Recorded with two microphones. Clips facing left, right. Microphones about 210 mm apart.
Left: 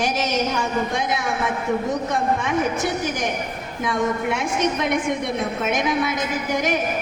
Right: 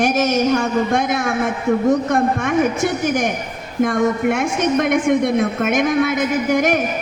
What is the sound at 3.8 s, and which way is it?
A woman's voice, 50° right (ahead or behind).